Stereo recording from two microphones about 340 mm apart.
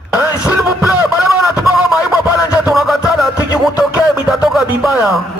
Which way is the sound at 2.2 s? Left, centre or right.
Centre.